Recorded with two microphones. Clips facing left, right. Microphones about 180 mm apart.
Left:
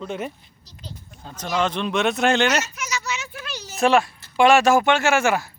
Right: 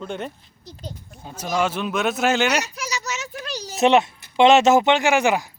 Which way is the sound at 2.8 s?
35° right (ahead or behind).